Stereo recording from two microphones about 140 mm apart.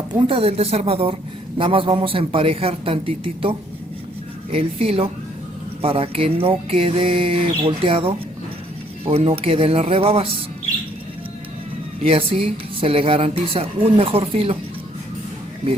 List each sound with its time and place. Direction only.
0.1 s a woman's voice: 40° right (ahead or behind)
4.5 s a woman's voice: 45° right (ahead or behind)
12.0 s a woman's voice: 40° right (ahead or behind)